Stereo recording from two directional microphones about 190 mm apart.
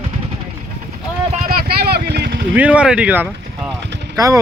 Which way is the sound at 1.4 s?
55° right (ahead or behind).